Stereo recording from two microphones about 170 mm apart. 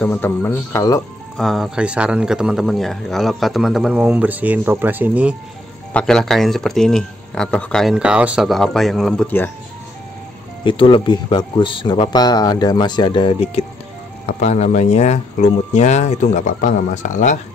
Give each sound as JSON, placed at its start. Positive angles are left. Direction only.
{"t": 0.0, "sound": "speech", "side_deg": 10}
{"t": 1.3, "sound": "a man's voice", "side_deg": 0}
{"t": 5.9, "sound": "a man's voice", "side_deg": 5}
{"t": 10.6, "sound": "speech", "side_deg": 30}